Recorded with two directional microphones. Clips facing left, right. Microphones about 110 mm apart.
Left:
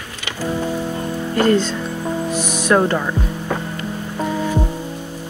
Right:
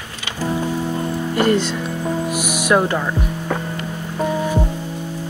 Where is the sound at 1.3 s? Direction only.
15° right (ahead or behind).